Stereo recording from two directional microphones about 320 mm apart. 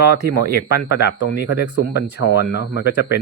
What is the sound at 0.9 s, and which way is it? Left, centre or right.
Speech, left.